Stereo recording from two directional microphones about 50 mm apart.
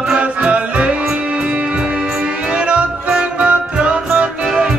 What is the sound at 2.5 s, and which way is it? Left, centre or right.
Music, right.